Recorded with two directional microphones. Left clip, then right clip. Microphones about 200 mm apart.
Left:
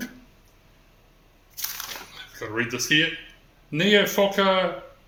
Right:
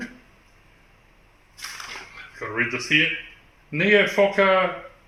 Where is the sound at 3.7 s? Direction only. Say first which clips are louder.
Right 2 dB; 10° left (ahead or behind).